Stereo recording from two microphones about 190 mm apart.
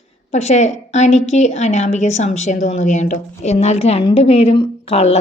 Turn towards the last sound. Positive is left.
turn(degrees=35)  # may be behind; listen again after turning